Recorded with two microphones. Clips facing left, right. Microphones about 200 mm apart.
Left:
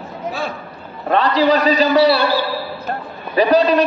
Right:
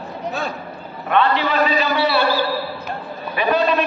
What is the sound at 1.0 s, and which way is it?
A man's voice, 35° left (ahead or behind).